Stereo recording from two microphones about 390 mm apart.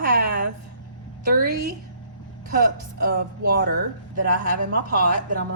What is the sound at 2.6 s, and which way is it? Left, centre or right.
A woman's voice, right.